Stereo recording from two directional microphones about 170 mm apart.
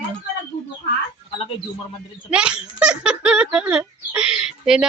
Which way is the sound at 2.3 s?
5° right (ahead or behind).